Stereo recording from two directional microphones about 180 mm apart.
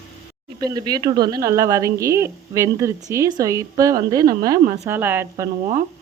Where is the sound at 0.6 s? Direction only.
20° right (ahead or behind).